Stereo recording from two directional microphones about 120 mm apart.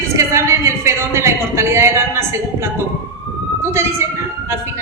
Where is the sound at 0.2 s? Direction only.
20° right (ahead or behind).